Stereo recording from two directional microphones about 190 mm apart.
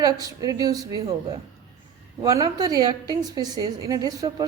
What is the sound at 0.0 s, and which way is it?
A woman's voice, 20° right (ahead or behind).